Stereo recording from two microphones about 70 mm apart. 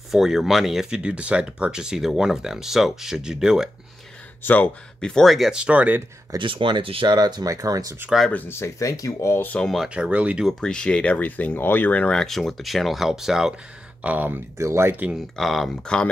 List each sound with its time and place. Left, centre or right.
0.1 s speech: centre
4.4 s speech: left
5.0 s speech: centre
5.5 s speech: centre
6.3 s speech: right
8.3 s speech: left
8.5 s speech: left
9.6 s speech: centre
9.8 s speech: centre
10.6 s speech: centre
12.2 s speech: centre
14.0 s speech: right
14.6 s speech: right
15.3 s speech: centre